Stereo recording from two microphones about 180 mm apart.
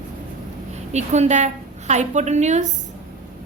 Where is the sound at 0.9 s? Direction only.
40° right (ahead or behind).